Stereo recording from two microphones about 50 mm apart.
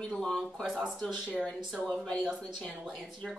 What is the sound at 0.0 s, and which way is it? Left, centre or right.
Speech, centre.